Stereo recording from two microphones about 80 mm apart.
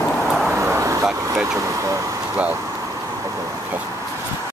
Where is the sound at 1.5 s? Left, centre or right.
Right.